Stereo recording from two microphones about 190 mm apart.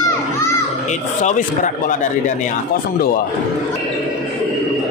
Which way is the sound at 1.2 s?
40° left (ahead or behind).